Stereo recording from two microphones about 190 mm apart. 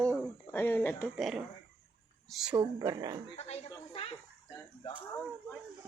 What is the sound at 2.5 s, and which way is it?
Speech, 20° right (ahead or behind).